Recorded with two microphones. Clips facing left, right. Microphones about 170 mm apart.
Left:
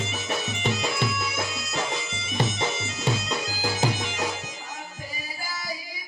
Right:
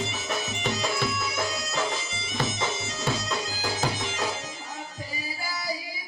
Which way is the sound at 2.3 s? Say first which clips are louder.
Left 2 dB; 20° left (ahead or behind).